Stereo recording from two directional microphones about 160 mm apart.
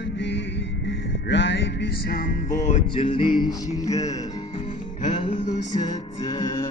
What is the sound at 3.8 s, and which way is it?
Music, 20° left (ahead or behind).